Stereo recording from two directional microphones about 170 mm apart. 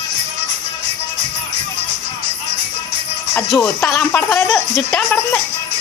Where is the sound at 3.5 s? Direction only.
15° left (ahead or behind).